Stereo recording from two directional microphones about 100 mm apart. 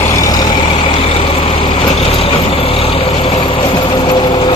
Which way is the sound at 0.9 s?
70° left (ahead or behind).